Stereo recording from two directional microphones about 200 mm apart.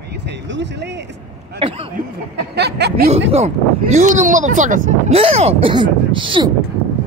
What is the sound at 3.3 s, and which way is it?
Speech, 30° right (ahead or behind).